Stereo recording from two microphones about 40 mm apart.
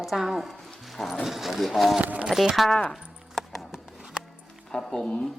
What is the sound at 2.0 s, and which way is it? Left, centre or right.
Speech, right.